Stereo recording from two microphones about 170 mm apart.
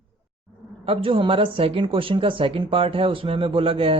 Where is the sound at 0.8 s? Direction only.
35° right (ahead or behind).